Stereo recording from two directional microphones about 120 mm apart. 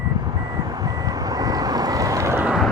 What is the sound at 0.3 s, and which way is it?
Reversing beeps, 35° right (ahead or behind).